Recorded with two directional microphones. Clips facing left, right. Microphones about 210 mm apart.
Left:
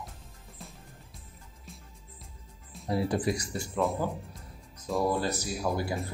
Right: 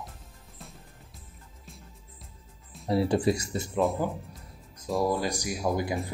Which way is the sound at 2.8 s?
30° right (ahead or behind).